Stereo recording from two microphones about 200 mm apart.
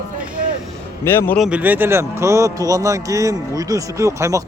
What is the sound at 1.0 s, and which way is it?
Speech, 10° left (ahead or behind).